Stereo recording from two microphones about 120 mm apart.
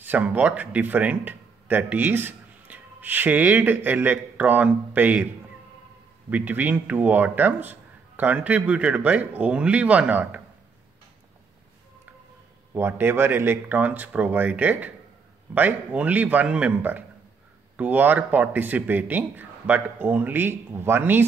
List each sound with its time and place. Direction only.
0.0 s speech: 15° right (ahead or behind)
6.3 s speech: 15° right (ahead or behind)
12.7 s speech: 15° right (ahead or behind)